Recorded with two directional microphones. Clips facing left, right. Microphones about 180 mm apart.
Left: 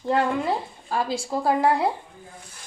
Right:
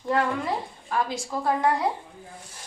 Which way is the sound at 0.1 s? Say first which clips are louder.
Left 2 dB; 30° left (ahead or behind).